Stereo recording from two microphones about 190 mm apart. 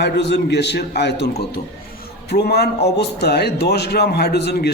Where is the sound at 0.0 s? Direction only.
60° left (ahead or behind).